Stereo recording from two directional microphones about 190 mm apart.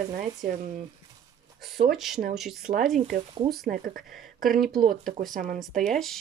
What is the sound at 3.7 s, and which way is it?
Speech, 50° right (ahead or behind).